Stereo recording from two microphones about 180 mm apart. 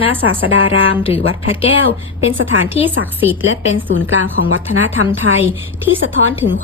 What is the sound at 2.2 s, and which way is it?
A woman's voice, 90° right.